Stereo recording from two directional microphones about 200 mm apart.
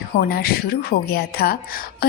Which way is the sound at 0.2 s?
50° left (ahead or behind).